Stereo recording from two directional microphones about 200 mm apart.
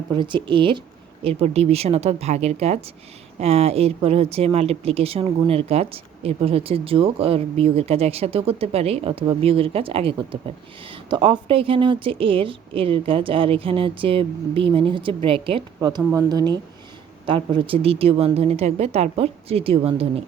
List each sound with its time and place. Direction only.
0.1 s speech: 25° right (ahead or behind)